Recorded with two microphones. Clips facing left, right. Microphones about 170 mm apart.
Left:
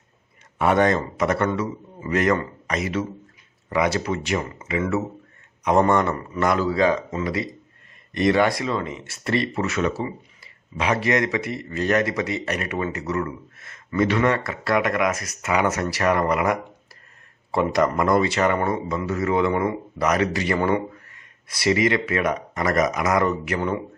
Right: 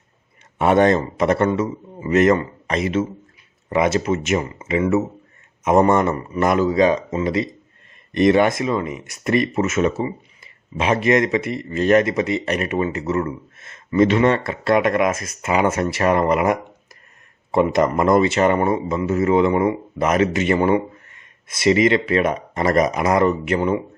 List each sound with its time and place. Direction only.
0.6 s speech: 25° right (ahead or behind)